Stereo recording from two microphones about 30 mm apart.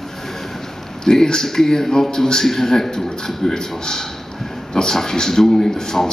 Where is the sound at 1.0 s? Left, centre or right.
Left.